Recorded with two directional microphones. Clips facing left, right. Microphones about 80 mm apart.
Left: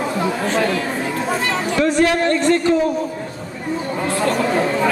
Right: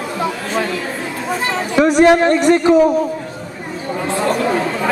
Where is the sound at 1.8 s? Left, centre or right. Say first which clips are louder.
Right 7 dB; centre.